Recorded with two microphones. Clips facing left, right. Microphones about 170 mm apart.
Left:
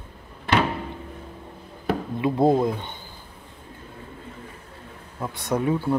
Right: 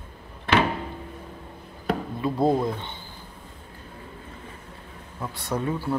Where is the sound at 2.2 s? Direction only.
20° left (ahead or behind).